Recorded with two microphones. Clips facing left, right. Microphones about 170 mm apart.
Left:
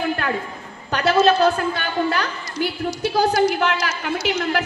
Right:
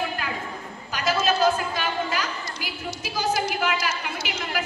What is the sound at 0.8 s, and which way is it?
A woman's voice, 65° left (ahead or behind).